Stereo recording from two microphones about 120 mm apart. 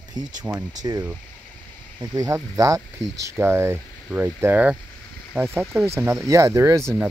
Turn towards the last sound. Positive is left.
turn(degrees=-20)  # may be behind; listen again after turning